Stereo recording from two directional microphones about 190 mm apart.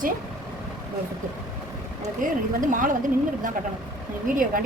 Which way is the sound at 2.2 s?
45° right (ahead or behind).